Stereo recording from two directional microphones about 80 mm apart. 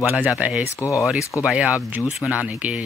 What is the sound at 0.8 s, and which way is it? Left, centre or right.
Speech, left.